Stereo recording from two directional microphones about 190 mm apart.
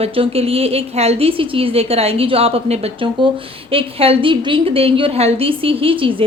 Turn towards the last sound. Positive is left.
turn(degrees=-30)  # may be behind; listen again after turning